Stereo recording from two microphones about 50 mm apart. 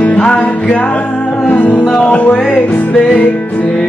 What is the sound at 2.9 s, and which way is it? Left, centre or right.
Music, left.